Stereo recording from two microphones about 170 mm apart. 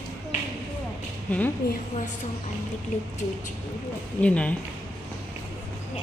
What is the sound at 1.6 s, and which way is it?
Speech, 65° left (ahead or behind).